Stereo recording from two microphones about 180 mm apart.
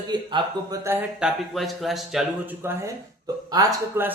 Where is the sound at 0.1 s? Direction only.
25° right (ahead or behind).